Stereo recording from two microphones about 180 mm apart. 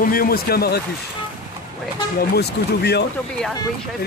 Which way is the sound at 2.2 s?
65° left (ahead or behind).